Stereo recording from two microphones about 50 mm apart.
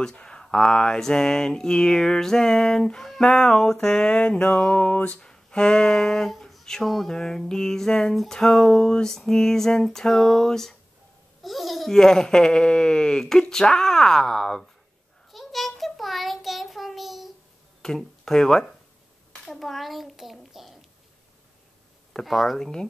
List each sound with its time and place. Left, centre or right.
0.0 s speech: centre
4.5 s music: left
5.2 s speech: centre
7.2 s a child's voice: centre
12.0 s speech: centre
15.3 s child singing: centre
17.8 s a child's voice: centre
22.2 s a child's voice: centre
22.6 s speech: centre